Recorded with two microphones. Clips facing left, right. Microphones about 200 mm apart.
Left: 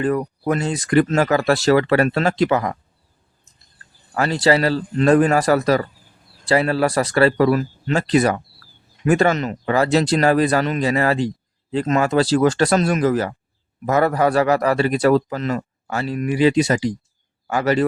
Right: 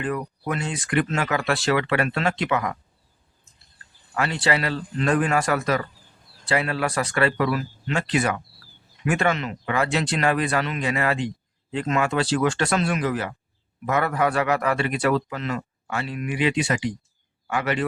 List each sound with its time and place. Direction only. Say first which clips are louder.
0.0 s speech: left 7 dB; 40° left (ahead or behind)
4.1 s speech: left 7 dB; 40° left (ahead or behind)